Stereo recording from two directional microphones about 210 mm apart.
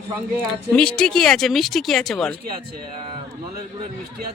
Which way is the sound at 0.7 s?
5° left (ahead or behind).